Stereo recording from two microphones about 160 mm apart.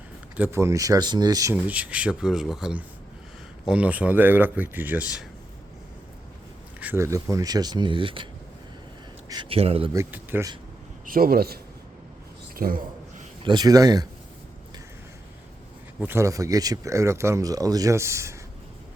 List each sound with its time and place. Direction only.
0.3 s speech: 15° right (ahead or behind)
1.5 s speech: 10° right (ahead or behind)
6.7 s speech: 15° right (ahead or behind); by 8.3 s 30° right (ahead or behind)
9.3 s speech: 30° right (ahead or behind)
9.9 s speech: 15° right (ahead or behind)
11.0 s a man's voice: 65° right (ahead or behind)
12.5 s a sound: 65° right (ahead or behind)
13.4 s speech: 25° right (ahead or behind)
16.0 s speech: 15° right (ahead or behind)